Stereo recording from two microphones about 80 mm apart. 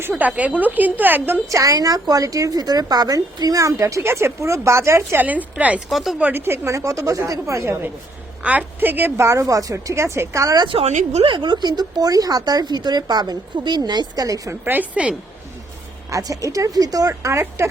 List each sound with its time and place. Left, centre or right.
0.1 s a woman's voice: centre
1.5 s speech: right
5.2 s a woman's voice: centre
5.9 s speech: centre
6.1 s a woman's voice: right
6.7 s a woman's voice: right
8.4 s a woman's voice: centre; by 10.5 s right
10.5 s speech: right
11.3 s speech: right
14.6 s a woman's voice: right
16.0 s speech: right